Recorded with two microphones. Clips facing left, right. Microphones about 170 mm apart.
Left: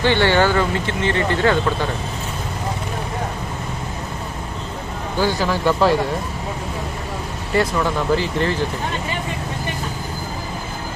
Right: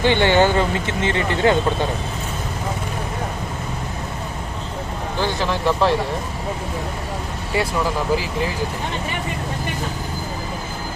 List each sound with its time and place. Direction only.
0.0 s speech: 15° right (ahead or behind)
5.2 s speech: 5° left (ahead or behind)
7.5 s speech: 5° right (ahead or behind)